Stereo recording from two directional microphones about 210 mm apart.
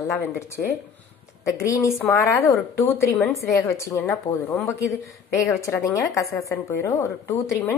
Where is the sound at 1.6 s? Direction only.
15° left (ahead or behind).